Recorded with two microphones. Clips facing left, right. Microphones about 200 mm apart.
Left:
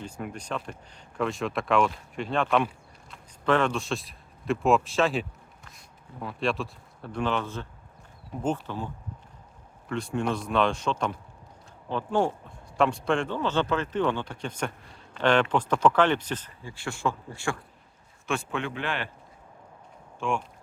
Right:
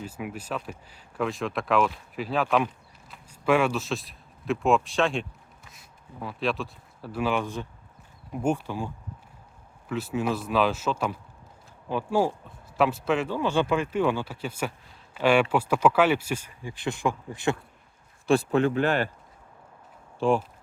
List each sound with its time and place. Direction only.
0.0 s speech: 5° right (ahead or behind)
9.9 s speech: 5° right (ahead or behind)
18.3 s speech: 35° right (ahead or behind)
20.1 s speech: 35° right (ahead or behind)